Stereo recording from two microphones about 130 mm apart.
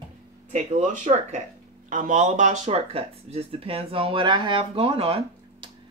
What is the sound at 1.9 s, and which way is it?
Speech, 85° right.